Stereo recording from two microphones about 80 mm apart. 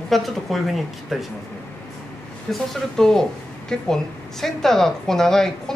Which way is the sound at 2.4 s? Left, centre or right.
Centre.